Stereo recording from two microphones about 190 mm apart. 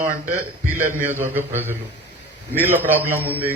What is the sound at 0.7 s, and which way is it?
A man's voice, 10° right (ahead or behind).